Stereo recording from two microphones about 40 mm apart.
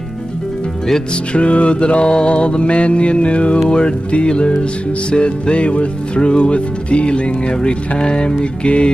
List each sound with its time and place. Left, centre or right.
1.3 s music: left